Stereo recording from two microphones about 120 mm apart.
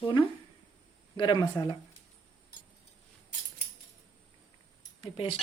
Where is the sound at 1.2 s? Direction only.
35° left (ahead or behind).